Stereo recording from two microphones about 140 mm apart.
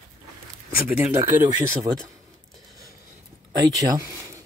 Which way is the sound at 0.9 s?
15° right (ahead or behind).